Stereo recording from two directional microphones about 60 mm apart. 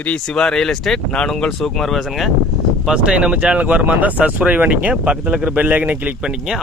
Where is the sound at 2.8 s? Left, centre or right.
Centre.